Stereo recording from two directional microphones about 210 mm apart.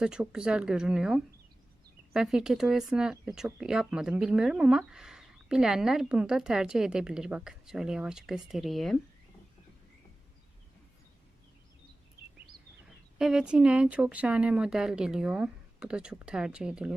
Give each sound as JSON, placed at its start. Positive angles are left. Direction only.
{"t": 0.0, "sound": "speech", "side_deg": -5}
{"t": 13.1, "sound": "speech", "side_deg": -5}